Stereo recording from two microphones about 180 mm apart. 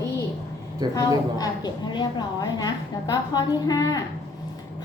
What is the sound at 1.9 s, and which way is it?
A woman's voice, 25° left (ahead or behind).